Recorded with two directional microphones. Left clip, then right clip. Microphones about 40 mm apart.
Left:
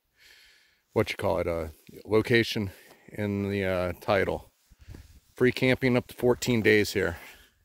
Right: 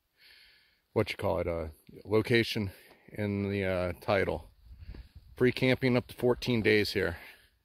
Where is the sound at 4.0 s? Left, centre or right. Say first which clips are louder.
Left 3 dB; left.